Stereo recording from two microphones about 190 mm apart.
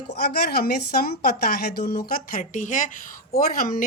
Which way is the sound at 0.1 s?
55° left (ahead or behind).